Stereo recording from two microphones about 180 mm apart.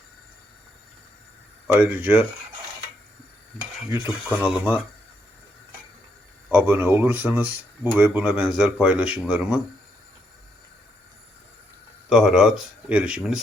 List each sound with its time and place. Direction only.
1.6 s speech: 10° right (ahead or behind)
4.0 s speech: 5° right (ahead or behind)
6.5 s speech: 10° right (ahead or behind)
12.0 s speech: 5° right (ahead or behind)